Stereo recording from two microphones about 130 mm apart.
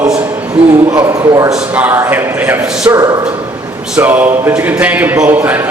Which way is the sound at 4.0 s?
15° right (ahead or behind).